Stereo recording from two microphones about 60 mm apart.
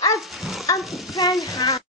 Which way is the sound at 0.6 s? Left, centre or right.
Left.